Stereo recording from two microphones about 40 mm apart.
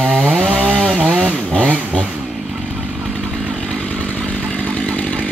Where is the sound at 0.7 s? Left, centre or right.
Centre.